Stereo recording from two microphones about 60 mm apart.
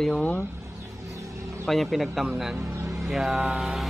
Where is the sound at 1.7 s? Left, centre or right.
Centre.